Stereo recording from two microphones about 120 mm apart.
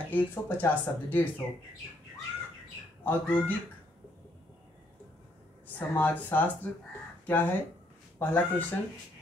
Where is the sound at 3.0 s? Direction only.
15° left (ahead or behind).